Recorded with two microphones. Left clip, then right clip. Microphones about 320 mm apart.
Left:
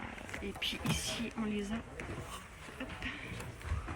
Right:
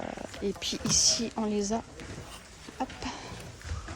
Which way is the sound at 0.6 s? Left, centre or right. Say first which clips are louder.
Right 10 dB; centre.